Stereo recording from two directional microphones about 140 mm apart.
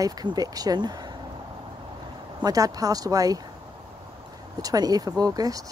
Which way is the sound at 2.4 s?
25° right (ahead or behind).